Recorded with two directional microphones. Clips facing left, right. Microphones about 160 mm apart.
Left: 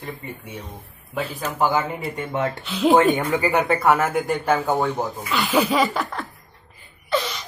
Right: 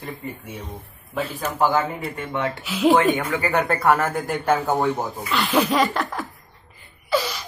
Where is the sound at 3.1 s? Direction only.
15° left (ahead or behind).